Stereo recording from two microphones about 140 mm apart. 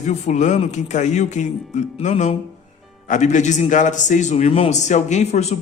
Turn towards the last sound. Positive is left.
turn(degrees=50)  # may be behind; listen again after turning